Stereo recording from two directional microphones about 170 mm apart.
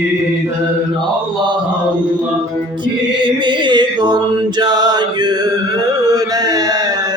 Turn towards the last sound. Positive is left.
turn(degrees=-20)  # may be behind; listen again after turning